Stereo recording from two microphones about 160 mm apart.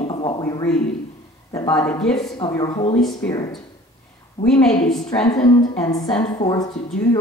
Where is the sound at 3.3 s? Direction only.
25° left (ahead or behind).